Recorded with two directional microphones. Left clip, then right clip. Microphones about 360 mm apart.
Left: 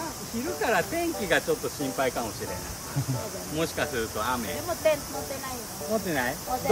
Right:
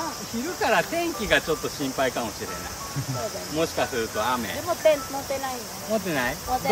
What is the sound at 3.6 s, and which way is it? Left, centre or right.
Speech, centre.